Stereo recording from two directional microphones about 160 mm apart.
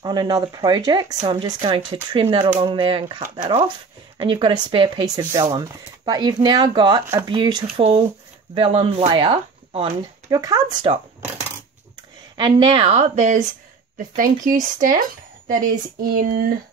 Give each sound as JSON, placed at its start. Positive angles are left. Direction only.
{"t": 0.0, "sound": "speech", "side_deg": -25}
{"t": 2.6, "sound": "speech", "side_deg": -30}
{"t": 4.2, "sound": "speech", "side_deg": -30}
{"t": 12.4, "sound": "a woman's voice", "side_deg": -30}